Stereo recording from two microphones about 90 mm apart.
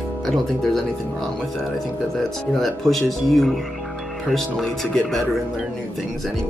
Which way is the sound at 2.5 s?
Centre (ahead or behind).